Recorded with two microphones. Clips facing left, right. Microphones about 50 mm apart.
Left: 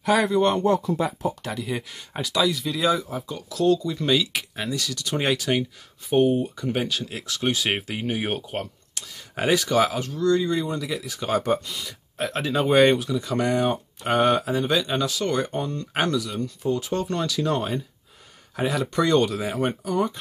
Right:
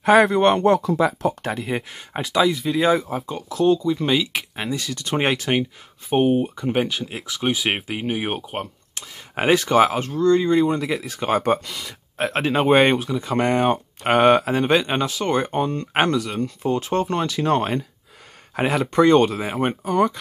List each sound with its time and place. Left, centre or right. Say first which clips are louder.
0.0 s speech: right 5 dB; right
0.7 s speech: right 5 dB; right
1.4 s speech: right 4 dB; right; by 4.5 s centre
4.6 s speech: right 1 dB; right
8.9 s speech: right 5 dB; right
15.0 s speech: right 3 dB; right
18.8 s speech: right 6 dB; right
19.9 s speech: right 7 dB; right